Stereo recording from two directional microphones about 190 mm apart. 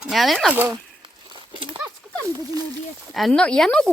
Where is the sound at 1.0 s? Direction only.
25° right (ahead or behind).